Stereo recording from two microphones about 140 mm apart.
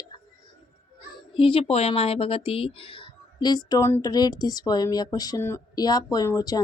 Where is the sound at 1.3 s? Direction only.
40° left (ahead or behind).